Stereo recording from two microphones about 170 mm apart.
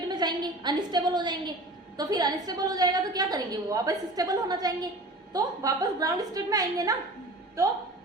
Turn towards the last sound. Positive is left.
turn(degrees=-20)  # may be behind; listen again after turning